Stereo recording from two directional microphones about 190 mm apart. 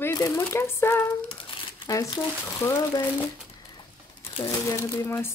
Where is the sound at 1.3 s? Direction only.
25° left (ahead or behind).